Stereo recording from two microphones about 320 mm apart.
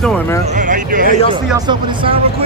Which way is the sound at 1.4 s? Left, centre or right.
Centre.